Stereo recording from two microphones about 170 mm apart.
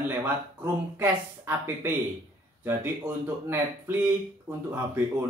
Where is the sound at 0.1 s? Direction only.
15° right (ahead or behind).